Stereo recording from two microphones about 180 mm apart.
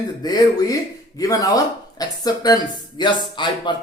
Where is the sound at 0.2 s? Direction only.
20° left (ahead or behind).